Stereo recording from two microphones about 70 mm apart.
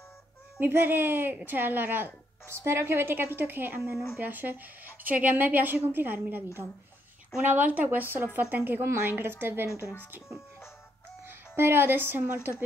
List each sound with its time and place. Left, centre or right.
0.6 s a woman's voice: right
11.2 s speech: right